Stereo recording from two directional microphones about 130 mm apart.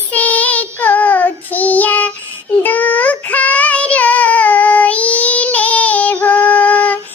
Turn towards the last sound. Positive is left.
turn(degrees=10)  # may be behind; listen again after turning